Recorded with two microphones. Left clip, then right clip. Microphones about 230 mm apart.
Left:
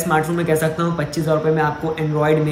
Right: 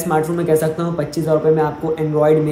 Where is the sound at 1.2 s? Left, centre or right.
Left.